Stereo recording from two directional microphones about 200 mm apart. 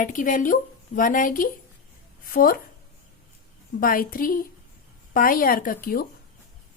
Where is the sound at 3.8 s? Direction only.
45° left (ahead or behind).